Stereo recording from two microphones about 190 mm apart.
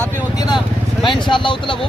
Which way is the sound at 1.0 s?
25° left (ahead or behind).